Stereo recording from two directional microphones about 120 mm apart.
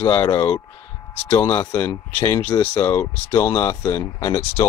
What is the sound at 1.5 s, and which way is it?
Speech, 20° left (ahead or behind).